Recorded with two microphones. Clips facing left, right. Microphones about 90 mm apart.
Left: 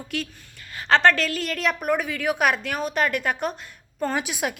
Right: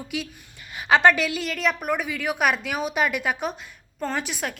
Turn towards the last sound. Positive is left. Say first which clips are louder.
# left 2 dB
turn(degrees=5)  # may be behind; listen again after turning